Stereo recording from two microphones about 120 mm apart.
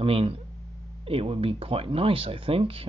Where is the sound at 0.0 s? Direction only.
50° right (ahead or behind).